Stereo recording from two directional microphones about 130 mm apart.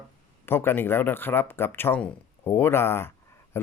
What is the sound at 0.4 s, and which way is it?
Speech, 15° left (ahead or behind).